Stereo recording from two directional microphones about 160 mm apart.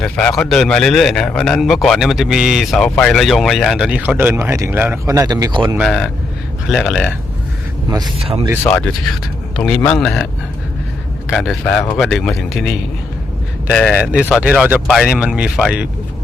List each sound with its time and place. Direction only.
0.0 s a man's voice: 5° left (ahead or behind); by 5.6 s 25° right (ahead or behind)
5.8 s a man's voice: centre (ahead or behind)
7.9 s speech: 25° right (ahead or behind)
8.2 s speech: 40° right (ahead or behind)
8.6 s a man's voice: 10° left (ahead or behind)
11.3 s a man's voice: centre (ahead or behind)